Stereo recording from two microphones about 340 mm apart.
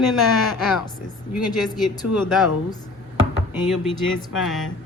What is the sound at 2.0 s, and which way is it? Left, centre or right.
Speech, left.